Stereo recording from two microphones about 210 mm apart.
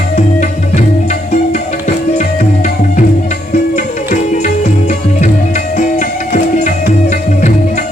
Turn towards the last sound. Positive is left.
turn(degrees=35)  # may be behind; listen again after turning